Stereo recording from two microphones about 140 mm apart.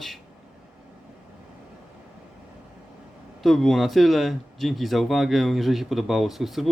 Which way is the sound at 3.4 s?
Centre (ahead or behind).